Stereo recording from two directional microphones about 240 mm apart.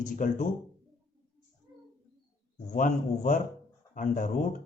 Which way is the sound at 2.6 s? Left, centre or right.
Left.